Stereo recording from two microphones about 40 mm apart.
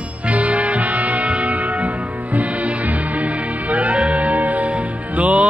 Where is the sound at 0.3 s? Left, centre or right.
Right.